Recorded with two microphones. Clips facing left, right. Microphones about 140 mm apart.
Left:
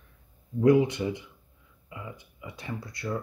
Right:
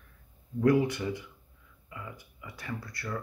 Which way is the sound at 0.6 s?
20° left (ahead or behind).